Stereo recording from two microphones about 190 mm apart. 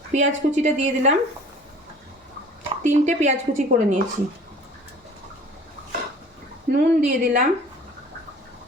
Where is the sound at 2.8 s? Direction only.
40° right (ahead or behind).